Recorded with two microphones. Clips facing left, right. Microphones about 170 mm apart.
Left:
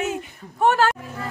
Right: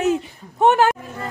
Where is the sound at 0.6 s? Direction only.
20° right (ahead or behind).